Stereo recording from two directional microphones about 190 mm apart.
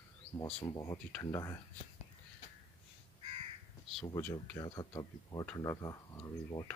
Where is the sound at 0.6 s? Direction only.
20° left (ahead or behind).